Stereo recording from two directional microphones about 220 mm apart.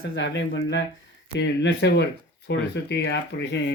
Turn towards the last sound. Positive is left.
turn(degrees=55)  # may be behind; listen again after turning